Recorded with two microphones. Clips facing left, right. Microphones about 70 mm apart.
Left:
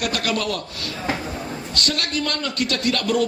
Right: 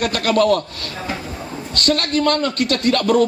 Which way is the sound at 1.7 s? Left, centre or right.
Right.